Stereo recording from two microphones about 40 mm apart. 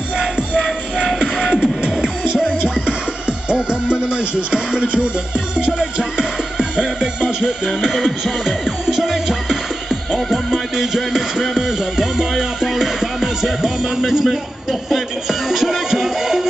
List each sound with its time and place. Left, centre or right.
0.2 s music: centre
7.6 s music: centre